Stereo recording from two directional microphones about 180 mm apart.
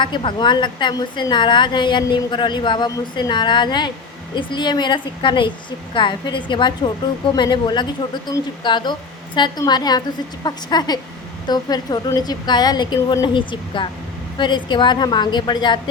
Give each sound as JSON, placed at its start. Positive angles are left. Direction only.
{"t": 0.0, "sound": "a woman's voice", "side_deg": 25}